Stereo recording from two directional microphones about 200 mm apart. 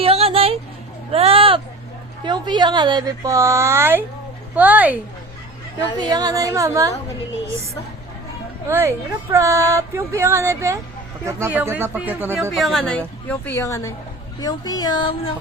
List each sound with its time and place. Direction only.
0.0 s a sound: 30° right (ahead or behind)
2.2 s speech: 20° right (ahead or behind)
6.0 s speech: 20° right (ahead or behind)
8.6 s speech: 15° right (ahead or behind)
12.5 s speech: centre (ahead or behind); by 15.3 s 20° left (ahead or behind)